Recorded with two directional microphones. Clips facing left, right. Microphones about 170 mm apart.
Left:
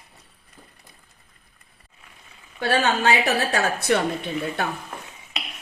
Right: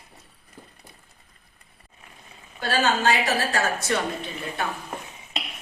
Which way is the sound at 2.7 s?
65° left (ahead or behind).